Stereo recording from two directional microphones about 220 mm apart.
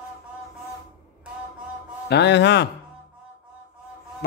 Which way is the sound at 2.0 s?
50° left (ahead or behind).